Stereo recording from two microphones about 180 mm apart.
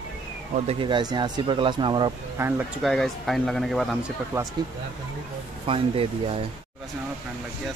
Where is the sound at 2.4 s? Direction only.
15° right (ahead or behind).